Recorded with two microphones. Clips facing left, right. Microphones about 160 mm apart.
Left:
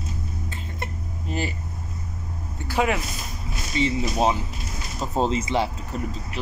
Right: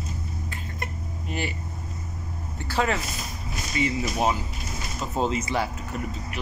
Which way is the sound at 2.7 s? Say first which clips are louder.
Left 2 dB; 10° left (ahead or behind).